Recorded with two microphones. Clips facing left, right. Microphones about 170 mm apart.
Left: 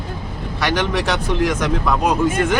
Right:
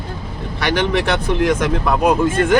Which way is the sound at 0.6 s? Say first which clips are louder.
Right 2 dB; 55° right (ahead or behind).